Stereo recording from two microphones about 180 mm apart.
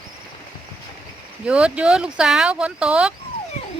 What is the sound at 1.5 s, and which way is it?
Speech, 5° right (ahead or behind).